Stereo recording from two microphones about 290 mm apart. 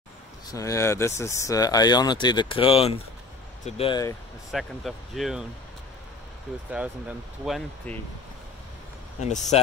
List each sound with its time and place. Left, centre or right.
0.5 s speech: centre
4.5 s speech: centre
6.7 s speech: centre
9.2 s speech: left